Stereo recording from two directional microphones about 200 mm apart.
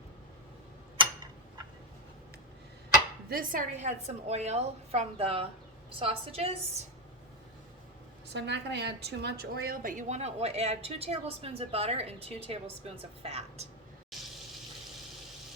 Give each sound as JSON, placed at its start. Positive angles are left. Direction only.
{"t": 3.2, "sound": "a woman's voice", "side_deg": -45}
{"t": 8.3, "sound": "a woman's voice", "side_deg": -60}
{"t": 14.1, "sound": "water", "side_deg": 0}